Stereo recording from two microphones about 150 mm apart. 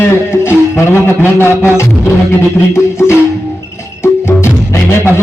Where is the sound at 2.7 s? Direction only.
15° left (ahead or behind).